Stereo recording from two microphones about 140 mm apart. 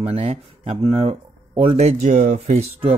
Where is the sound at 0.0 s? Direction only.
45° right (ahead or behind).